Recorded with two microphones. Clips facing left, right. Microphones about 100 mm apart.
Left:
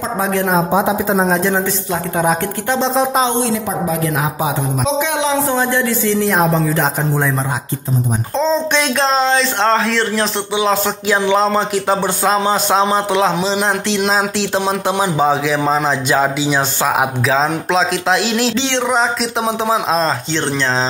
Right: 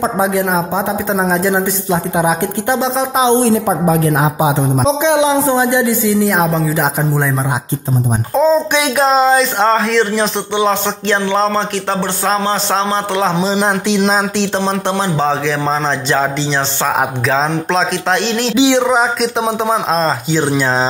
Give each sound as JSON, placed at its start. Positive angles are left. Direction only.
{"t": 0.3, "sound": "a man's voice", "side_deg": 0}
{"t": 2.8, "sound": "a man's voice", "side_deg": -5}
{"t": 3.4, "sound": "a woman's voice", "side_deg": -45}
{"t": 4.2, "sound": "a man's voice", "side_deg": -25}
{"t": 6.1, "sound": "a man's voice", "side_deg": 0}
{"t": 8.4, "sound": "a man's voice", "side_deg": -5}
{"t": 18.6, "sound": "speech", "side_deg": -10}